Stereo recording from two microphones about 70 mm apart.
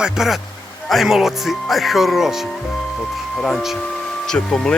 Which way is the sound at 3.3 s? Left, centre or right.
Centre.